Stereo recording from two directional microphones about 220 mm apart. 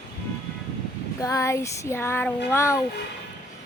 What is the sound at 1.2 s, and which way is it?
Speech, 15° left (ahead or behind).